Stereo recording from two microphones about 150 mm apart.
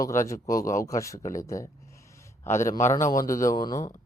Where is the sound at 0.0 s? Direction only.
20° left (ahead or behind).